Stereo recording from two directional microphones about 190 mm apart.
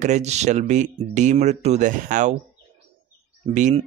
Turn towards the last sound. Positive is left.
turn(degrees=-40)  # may be behind; listen again after turning